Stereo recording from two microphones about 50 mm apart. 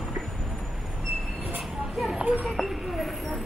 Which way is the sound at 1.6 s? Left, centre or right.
Centre.